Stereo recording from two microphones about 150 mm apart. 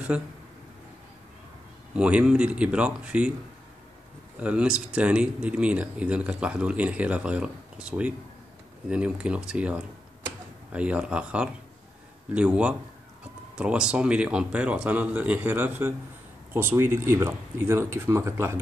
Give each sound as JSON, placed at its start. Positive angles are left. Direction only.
{"t": 0.1, "sound": "speech", "side_deg": -10}
{"t": 2.0, "sound": "speech", "side_deg": -5}
{"t": 4.4, "sound": "speech", "side_deg": -10}